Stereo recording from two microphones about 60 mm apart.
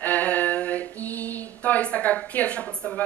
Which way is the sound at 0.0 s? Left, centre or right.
Left.